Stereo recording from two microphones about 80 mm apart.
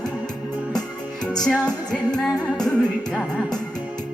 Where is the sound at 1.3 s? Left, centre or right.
Centre.